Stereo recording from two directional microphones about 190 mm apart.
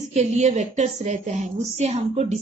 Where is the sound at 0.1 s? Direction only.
35° right (ahead or behind).